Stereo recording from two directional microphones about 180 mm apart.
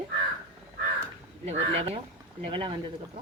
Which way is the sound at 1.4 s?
35° right (ahead or behind).